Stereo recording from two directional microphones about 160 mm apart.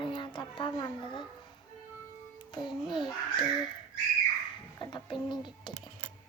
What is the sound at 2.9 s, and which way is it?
Speech, centre (ahead or behind).